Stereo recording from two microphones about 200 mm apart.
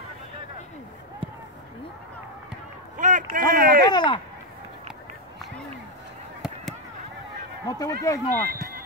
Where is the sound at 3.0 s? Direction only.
40° right (ahead or behind).